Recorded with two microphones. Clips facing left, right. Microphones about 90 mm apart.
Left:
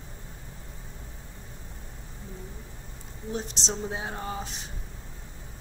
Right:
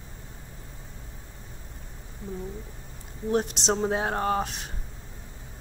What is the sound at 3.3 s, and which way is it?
Speech, 60° right (ahead or behind).